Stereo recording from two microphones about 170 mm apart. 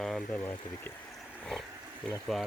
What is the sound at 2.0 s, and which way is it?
Speech, centre (ahead or behind).